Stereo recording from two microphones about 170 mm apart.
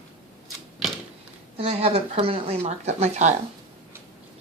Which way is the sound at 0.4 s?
Centre (ahead or behind).